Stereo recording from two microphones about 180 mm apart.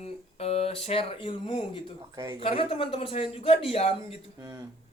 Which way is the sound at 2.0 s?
25° right (ahead or behind).